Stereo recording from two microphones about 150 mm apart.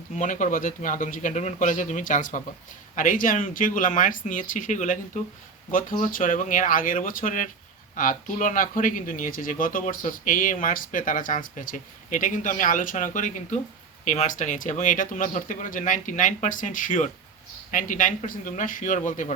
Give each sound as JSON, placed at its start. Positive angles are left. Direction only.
{"t": 0.2, "sound": "speech", "side_deg": 60}